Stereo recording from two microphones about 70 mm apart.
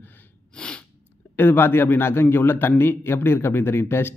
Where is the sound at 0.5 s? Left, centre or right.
Centre.